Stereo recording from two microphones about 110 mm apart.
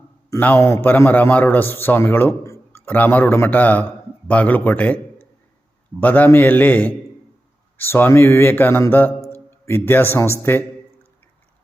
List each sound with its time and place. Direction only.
0.3 s a man's voice: 15° left (ahead or behind)
6.0 s a man's voice: 15° left (ahead or behind)